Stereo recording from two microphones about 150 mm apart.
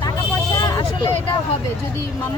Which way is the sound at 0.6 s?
25° left (ahead or behind).